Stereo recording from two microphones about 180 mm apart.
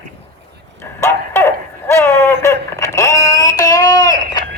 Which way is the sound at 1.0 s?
15° left (ahead or behind).